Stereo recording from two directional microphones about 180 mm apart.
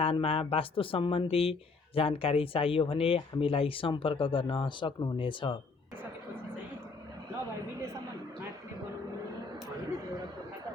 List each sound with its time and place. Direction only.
0.0 s speech: 30° left (ahead or behind)